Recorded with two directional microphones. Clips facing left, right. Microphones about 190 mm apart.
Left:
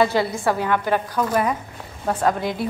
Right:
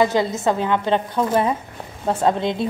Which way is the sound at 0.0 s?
20° right (ahead or behind).